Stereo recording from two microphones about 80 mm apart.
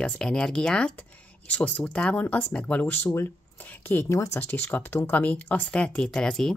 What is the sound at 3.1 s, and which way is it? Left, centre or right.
Speech, left.